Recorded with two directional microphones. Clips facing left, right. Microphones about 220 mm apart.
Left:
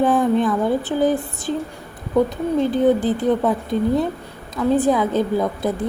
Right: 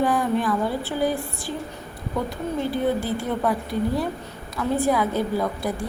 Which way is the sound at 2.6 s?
20° left (ahead or behind).